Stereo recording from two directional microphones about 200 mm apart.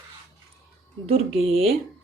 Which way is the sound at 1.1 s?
30° right (ahead or behind).